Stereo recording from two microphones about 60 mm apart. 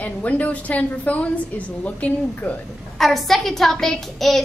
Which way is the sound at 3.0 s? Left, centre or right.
Centre.